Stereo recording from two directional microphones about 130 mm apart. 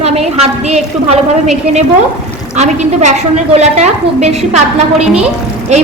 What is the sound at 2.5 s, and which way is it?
A woman's voice, 65° right (ahead or behind).